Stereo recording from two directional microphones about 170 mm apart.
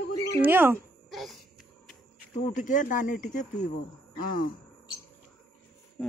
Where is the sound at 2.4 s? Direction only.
50° left (ahead or behind).